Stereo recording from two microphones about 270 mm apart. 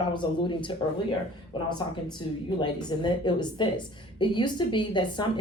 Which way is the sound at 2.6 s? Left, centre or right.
Centre.